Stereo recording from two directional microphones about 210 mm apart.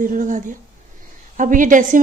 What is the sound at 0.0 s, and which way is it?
A woman's voice, 40° right (ahead or behind).